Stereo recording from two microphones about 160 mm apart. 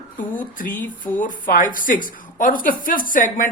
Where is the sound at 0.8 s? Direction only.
10° left (ahead or behind).